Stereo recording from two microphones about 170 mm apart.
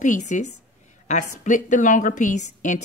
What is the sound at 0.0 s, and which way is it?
Speech, 45° left (ahead or behind).